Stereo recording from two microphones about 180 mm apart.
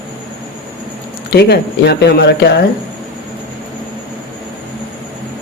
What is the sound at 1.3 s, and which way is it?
Speech, 65° left (ahead or behind).